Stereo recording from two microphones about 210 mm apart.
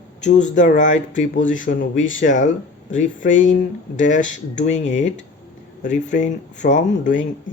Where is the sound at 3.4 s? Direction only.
35° left (ahead or behind).